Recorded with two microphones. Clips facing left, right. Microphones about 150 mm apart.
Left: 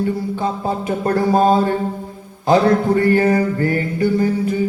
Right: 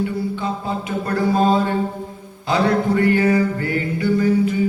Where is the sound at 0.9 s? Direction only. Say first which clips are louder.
Left 3 dB; 45° left (ahead or behind).